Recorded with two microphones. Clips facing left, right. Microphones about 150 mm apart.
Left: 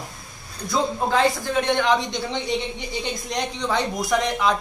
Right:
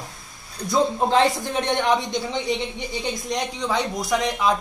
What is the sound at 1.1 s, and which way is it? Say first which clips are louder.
Speech: right 1 dB; 20° right (ahead or behind).